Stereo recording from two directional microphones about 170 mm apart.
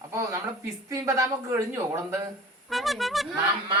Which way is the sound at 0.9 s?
20° right (ahead or behind).